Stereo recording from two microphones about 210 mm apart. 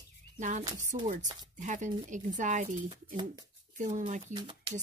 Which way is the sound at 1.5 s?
35° right (ahead or behind).